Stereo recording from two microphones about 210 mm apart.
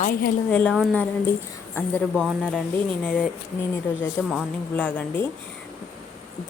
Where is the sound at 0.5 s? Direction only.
5° left (ahead or behind).